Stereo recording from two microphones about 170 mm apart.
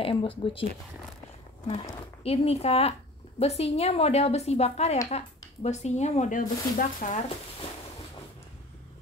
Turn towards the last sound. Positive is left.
turn(degrees=55)  # may be behind; listen again after turning